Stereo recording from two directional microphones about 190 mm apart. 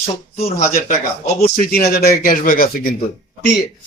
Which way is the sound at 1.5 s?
55° left (ahead or behind).